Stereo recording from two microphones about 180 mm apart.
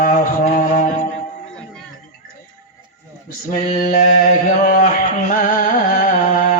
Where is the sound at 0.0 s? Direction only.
45° left (ahead or behind).